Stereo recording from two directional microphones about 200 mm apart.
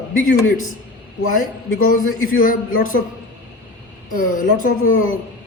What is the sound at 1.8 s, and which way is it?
Speech, 40° left (ahead or behind).